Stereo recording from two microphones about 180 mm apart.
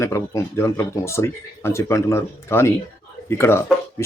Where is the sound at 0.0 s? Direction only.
15° left (ahead or behind).